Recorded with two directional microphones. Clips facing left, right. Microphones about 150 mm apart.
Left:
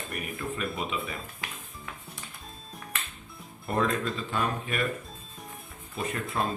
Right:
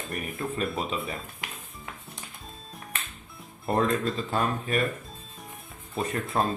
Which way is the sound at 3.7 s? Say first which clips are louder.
Right 2 dB; 40° right (ahead or behind).